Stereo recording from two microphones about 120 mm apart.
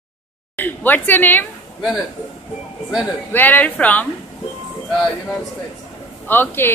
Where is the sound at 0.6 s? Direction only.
15° left (ahead or behind).